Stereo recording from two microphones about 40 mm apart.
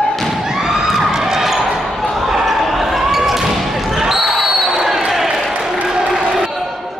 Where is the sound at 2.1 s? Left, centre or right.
Centre.